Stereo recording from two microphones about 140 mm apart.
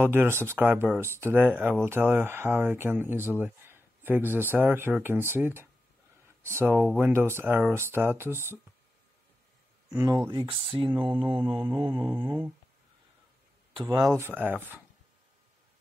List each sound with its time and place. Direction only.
0.0 s speech: 15° right (ahead or behind)
9.9 s speech: 30° right (ahead or behind)
11.6 s speech: 20° right (ahead or behind)
13.7 s speech: 30° right (ahead or behind)
14.0 s speech: 15° right (ahead or behind)